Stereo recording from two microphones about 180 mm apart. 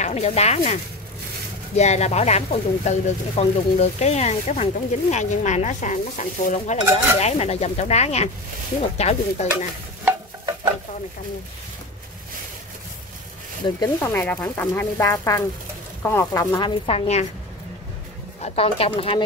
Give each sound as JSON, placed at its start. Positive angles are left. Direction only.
{"t": 0.0, "sound": "speech", "side_deg": 35}
{"t": 1.8, "sound": "speech", "side_deg": 40}
{"t": 10.0, "sound": "stir", "side_deg": -20}
{"t": 13.7, "sound": "speech", "side_deg": 15}
{"t": 16.5, "sound": "speech", "side_deg": 30}
{"t": 18.4, "sound": "speech", "side_deg": 35}